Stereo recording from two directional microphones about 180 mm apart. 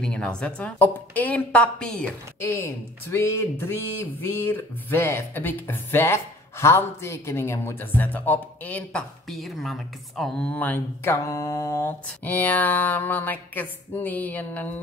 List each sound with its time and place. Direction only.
0.0 s a woman's voice: 5° left (ahead or behind)